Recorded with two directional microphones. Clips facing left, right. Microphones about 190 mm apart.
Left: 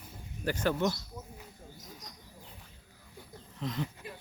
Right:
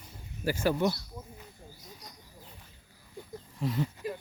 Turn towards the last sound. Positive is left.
turn(degrees=-10)  # may be behind; listen again after turning